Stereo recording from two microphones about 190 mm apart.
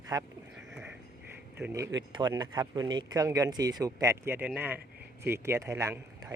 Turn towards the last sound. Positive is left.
turn(degrees=-15)  # may be behind; listen again after turning